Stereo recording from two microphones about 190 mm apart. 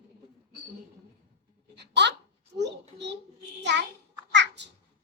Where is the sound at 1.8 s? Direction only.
65° right (ahead or behind).